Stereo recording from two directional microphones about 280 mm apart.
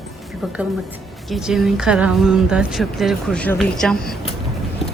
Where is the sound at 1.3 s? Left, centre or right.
Centre.